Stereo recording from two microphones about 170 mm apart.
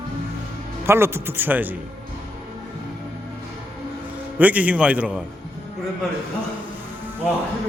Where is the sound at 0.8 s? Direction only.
15° right (ahead or behind).